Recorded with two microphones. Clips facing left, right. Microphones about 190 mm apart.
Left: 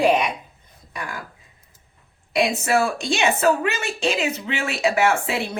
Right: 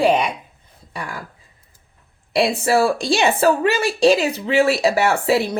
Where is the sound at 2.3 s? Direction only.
30° right (ahead or behind).